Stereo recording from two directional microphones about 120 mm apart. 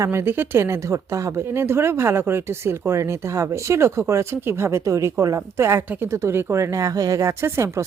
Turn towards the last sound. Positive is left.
turn(degrees=-25)  # may be behind; listen again after turning